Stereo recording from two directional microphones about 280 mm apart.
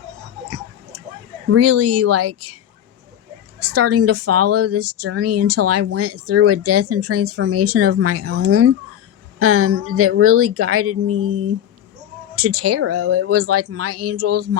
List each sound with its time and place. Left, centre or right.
1.5 s speech: right
3.6 s speech: right